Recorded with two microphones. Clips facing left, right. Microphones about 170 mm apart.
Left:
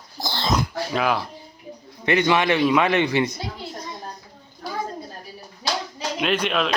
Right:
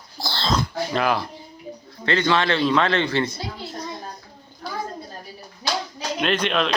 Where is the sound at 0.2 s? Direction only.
15° left (ahead or behind).